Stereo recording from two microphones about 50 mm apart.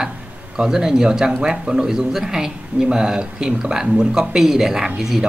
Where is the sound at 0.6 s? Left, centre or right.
Centre.